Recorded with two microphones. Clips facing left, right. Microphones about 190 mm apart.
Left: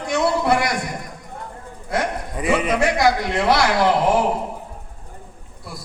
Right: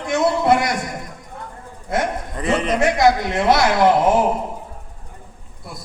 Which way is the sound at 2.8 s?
20° right (ahead or behind).